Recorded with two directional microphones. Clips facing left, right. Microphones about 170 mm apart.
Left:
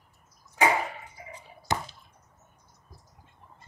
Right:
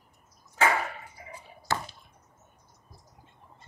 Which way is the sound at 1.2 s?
20° left (ahead or behind).